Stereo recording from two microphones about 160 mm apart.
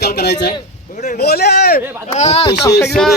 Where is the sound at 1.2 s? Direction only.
85° left.